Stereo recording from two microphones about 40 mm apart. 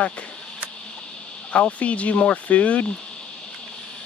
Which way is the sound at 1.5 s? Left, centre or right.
Left.